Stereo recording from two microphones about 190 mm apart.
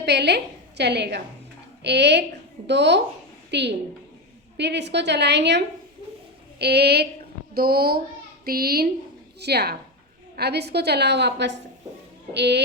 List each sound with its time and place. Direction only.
0.0 s a woman's voice: 60° right (ahead or behind)